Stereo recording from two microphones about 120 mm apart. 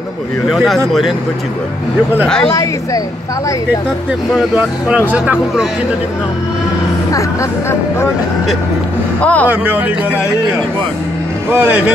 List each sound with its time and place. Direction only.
0.5 s speech: centre (ahead or behind)
2.2 s speech: 5° left (ahead or behind)
2.5 s speech: 30° left (ahead or behind)
4.4 s speech: 10° right (ahead or behind)
9.2 s speech: 10° left (ahead or behind)
9.5 s speech: 15° right (ahead or behind)
11.5 s speech: 20° right (ahead or behind)